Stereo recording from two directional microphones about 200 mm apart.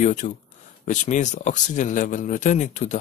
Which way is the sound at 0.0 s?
40° left (ahead or behind).